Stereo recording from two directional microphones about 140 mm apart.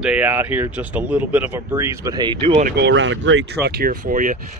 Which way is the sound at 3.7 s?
90° right.